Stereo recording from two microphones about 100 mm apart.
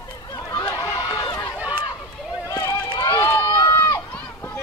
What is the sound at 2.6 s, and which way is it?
Run, 40° left (ahead or behind).